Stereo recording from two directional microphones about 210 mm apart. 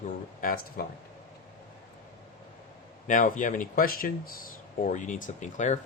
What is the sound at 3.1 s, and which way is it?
Speech, 40° left (ahead or behind).